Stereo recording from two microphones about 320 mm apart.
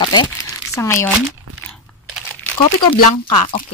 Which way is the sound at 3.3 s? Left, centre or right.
Centre.